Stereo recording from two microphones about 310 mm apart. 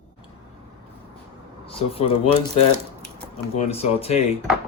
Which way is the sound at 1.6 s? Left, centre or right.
Centre.